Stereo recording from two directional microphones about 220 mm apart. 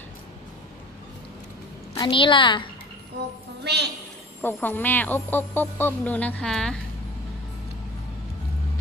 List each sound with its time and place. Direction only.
2.0 s a woman's voice: 20° left (ahead or behind)
3.6 s a woman's voice: 50° right (ahead or behind)
4.4 s speech: 10° left (ahead or behind)